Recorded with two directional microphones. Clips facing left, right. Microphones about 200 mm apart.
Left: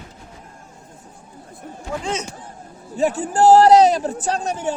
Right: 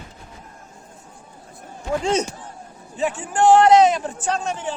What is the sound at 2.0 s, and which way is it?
Speech, 35° right (ahead or behind).